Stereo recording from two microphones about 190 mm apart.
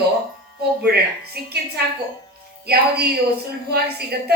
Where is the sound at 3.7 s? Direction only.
55° right (ahead or behind).